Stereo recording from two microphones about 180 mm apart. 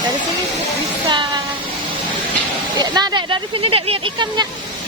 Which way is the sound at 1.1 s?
25° right (ahead or behind).